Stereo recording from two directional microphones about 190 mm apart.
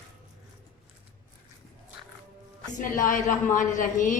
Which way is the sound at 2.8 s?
45° left (ahead or behind).